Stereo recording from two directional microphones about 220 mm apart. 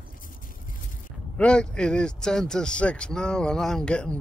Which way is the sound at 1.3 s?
5° left (ahead or behind).